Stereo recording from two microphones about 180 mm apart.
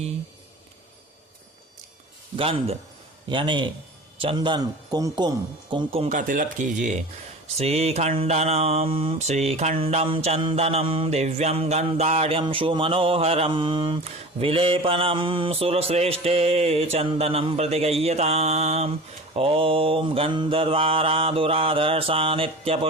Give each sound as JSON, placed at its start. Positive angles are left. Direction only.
{"t": 2.3, "sound": "mantra", "side_deg": -30}
{"t": 3.2, "sound": "a man's voice", "side_deg": -25}
{"t": 5.7, "sound": "mantra", "side_deg": -35}
{"t": 6.1, "sound": "speech", "side_deg": -45}
{"t": 7.5, "sound": "mantra", "side_deg": -35}